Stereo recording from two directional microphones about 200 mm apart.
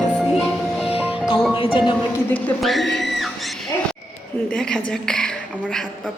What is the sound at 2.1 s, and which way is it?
Speech, 10° left (ahead or behind).